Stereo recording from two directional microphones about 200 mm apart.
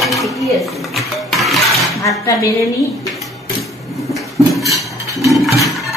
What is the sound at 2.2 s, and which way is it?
Speech, 15° left (ahead or behind).